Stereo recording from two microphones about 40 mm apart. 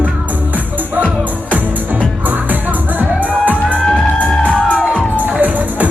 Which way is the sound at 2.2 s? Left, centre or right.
Right.